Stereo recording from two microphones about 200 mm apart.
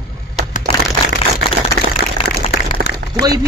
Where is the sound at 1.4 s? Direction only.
50° left (ahead or behind).